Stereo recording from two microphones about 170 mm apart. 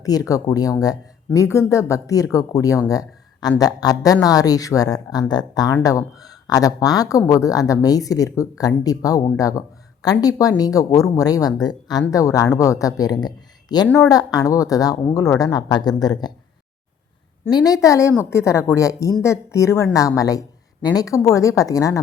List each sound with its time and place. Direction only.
0.0 s speech: 20° left (ahead or behind)
2.9 s a sound: 20° left (ahead or behind)
3.6 s speech: 20° left (ahead or behind)
17.5 s speech: 20° left (ahead or behind)